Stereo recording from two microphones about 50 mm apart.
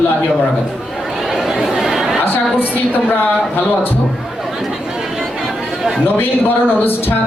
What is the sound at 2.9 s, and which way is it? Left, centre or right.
A man's voice, left.